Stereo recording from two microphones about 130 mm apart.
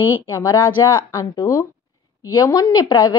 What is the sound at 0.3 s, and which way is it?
A woman's voice, 25° left (ahead or behind).